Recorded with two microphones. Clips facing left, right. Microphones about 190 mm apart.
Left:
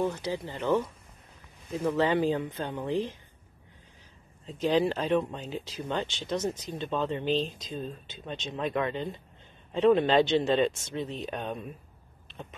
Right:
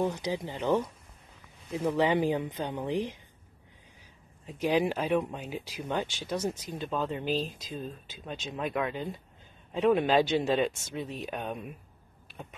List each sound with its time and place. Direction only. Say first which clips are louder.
0.0 s speech: even; 15° right (ahead or behind)
4.5 s speech: left 1 dB; 10° right (ahead or behind)
12.3 s vehicle: left 1 dB; 10° right (ahead or behind)